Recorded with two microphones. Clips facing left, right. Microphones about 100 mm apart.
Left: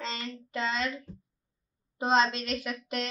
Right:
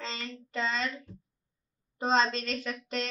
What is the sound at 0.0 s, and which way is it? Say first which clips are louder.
Child singing: left 2 dB; 5° left (ahead or behind).